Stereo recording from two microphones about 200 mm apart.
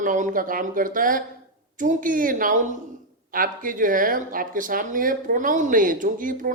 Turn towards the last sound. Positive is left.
turn(degrees=-45)  # may be behind; listen again after turning